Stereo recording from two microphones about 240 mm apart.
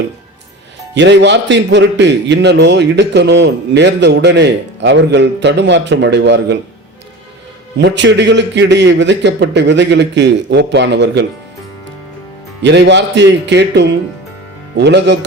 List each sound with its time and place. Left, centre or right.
0.9 s a man's voice: right
7.8 s a man's voice: right
12.6 s a man's voice: right